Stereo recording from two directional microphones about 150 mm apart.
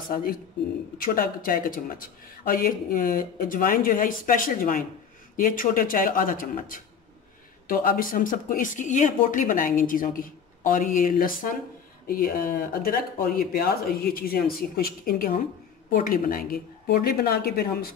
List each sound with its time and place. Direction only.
0.1 s speech: 75° left (ahead or behind); by 17.9 s 90° left